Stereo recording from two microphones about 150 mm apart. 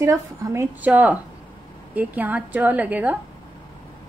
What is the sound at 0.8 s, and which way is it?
A woman's voice, 10° right (ahead or behind).